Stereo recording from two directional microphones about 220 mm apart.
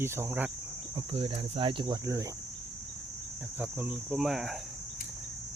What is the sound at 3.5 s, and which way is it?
Speech, 5° right (ahead or behind).